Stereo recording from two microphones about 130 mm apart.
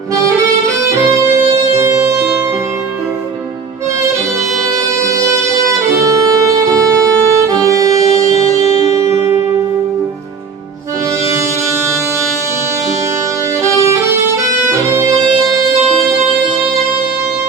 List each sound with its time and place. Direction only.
1.7 s music: 20° right (ahead or behind)
4.6 s music: 25° right (ahead or behind)